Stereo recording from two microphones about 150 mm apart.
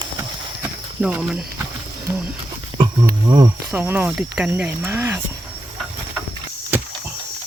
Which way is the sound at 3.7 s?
10° right (ahead or behind).